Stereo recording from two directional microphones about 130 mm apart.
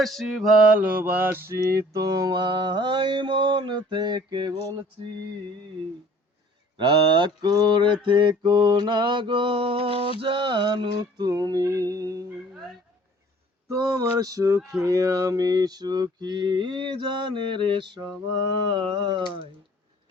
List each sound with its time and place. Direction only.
0.0 s mantra: centre (ahead or behind); by 4.5 s 35° right (ahead or behind)
6.7 s mantra: 35° right (ahead or behind)
13.7 s mantra: 25° right (ahead or behind)